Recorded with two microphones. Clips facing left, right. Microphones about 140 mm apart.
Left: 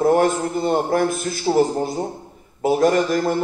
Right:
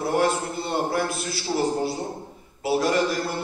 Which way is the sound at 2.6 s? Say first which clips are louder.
Left 5 dB; 45° left (ahead or behind).